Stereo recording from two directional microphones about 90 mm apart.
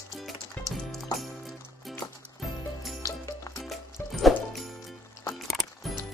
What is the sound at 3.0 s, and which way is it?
Music, 35° left (ahead or behind).